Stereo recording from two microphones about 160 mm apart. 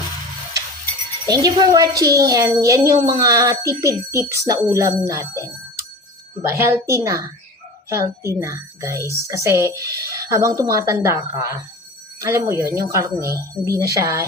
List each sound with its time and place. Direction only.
1.3 s a woman's voice: 25° right (ahead or behind)